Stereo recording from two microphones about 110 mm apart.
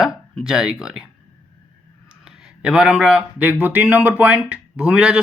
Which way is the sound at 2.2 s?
5° right (ahead or behind).